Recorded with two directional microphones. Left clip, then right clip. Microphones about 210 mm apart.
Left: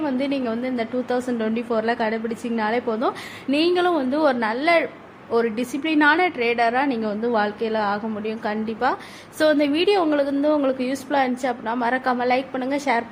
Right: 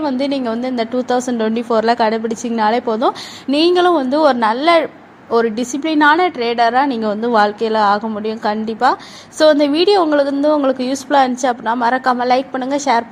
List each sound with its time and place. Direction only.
0.0 s a woman's voice: 20° right (ahead or behind)